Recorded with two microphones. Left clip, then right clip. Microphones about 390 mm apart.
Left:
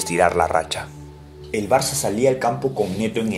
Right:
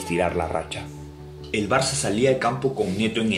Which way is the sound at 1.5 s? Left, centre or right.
Centre.